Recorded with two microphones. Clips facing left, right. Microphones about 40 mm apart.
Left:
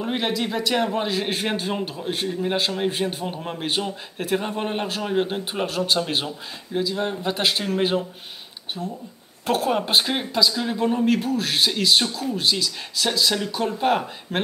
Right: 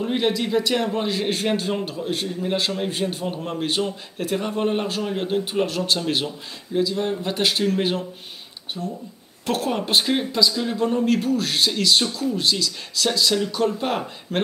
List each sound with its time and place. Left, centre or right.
0.0 s a man's voice: centre
8.8 s speech: centre
9.5 s a man's voice: centre